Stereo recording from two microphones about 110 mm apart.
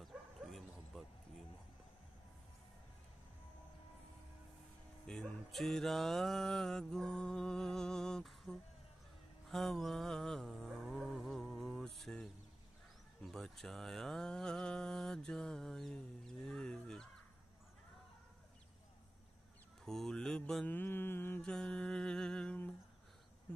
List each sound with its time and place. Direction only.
0.0 s bow-wow: centre (ahead or behind)
5.0 s music: 5° left (ahead or behind)
9.5 s mantra: centre (ahead or behind)
11.0 s music: centre (ahead or behind)
13.2 s a sound: centre (ahead or behind)
19.8 s mantra: 5° left (ahead or behind)
20.6 s mantra: 20° left (ahead or behind)
21.4 s music: 5° left (ahead or behind)